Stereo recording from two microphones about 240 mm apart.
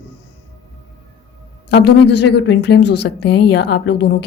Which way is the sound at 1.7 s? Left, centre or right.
Left.